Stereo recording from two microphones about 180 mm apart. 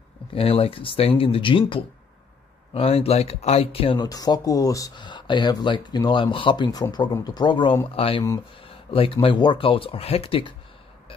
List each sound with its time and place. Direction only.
0.3 s speech: 30° left (ahead or behind)